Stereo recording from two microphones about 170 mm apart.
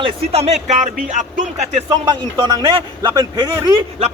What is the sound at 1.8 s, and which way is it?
A man's voice, 25° right (ahead or behind).